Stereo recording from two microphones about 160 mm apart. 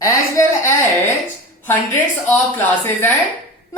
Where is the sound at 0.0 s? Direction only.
20° left (ahead or behind).